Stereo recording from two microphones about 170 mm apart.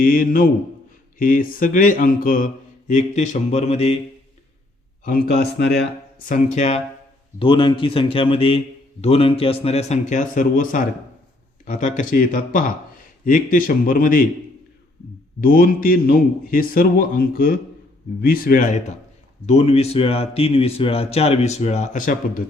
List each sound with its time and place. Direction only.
0.0 s a man's voice: 55° left (ahead or behind); by 3.9 s 40° left (ahead or behind)
5.0 s speech: 65° left (ahead or behind)
6.2 s speech: 50° left (ahead or behind)
7.3 s a man's voice: 30° left (ahead or behind); by 14.3 s 55° left (ahead or behind)
15.4 s a man's voice: 55° left (ahead or behind)